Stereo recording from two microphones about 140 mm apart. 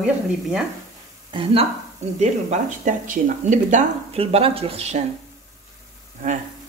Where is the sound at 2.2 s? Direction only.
60° right (ahead or behind).